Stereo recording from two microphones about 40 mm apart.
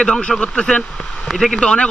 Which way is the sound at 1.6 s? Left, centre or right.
Left.